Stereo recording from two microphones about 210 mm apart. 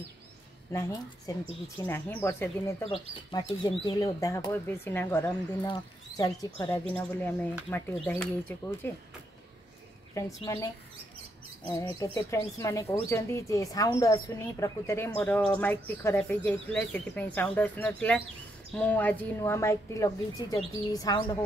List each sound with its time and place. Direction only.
0.7 s speech: 15° left (ahead or behind)
10.1 s speech: 15° left (ahead or behind)
11.7 s speech: 15° left (ahead or behind)